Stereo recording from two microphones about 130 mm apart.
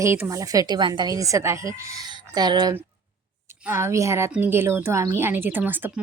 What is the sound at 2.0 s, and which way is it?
Speech, 35° right (ahead or behind).